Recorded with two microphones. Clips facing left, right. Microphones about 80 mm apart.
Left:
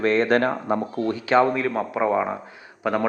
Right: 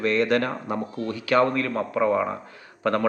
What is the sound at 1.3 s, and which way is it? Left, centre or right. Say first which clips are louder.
Speech: left 1 dB; centre.